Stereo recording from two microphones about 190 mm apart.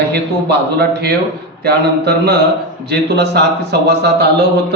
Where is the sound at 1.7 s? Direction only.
60° right (ahead or behind).